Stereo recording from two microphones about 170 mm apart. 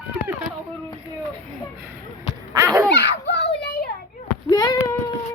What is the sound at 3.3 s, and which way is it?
Child singing, 85° left.